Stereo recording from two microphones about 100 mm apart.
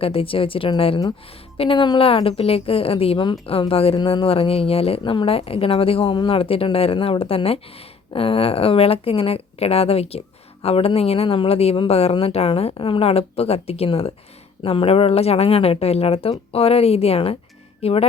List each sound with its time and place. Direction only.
0.0 s a woman's voice: 70° left (ahead or behind)
12.7 s a woman's voice: 60° left (ahead or behind); by 17.3 s 80° left
17.8 s speech: 90° left